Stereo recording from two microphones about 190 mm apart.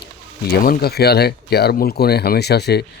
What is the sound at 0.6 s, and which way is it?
Speech, 55° left (ahead or behind).